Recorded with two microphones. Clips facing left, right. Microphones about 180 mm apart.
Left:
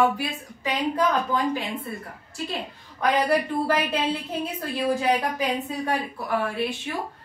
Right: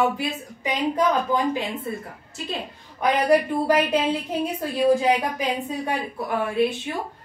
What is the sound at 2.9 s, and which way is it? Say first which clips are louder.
Speech: right 3 dB; 15° right (ahead or behind).